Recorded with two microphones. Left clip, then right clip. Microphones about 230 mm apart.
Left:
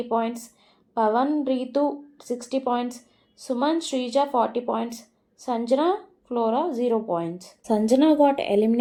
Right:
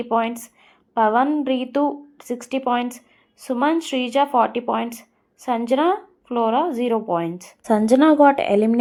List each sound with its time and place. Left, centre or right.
0.0 s speech: right